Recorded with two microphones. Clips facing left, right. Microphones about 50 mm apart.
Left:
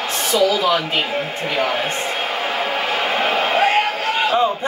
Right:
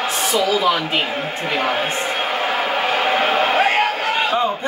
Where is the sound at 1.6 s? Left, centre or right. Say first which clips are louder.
Right 2 dB; centre.